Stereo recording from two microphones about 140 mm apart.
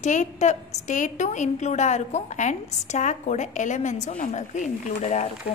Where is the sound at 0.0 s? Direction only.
60° left (ahead or behind).